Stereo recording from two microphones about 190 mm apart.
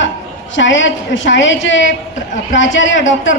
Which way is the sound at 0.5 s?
80° left.